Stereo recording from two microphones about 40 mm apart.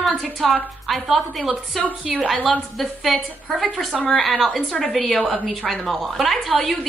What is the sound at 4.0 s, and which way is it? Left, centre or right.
Speech, left.